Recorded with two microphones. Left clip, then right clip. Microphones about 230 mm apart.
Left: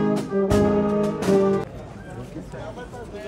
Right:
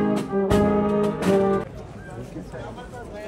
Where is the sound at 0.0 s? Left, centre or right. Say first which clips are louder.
Left 1 dB; right.